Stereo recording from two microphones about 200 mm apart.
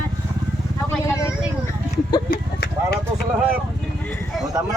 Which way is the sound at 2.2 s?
55° left (ahead or behind).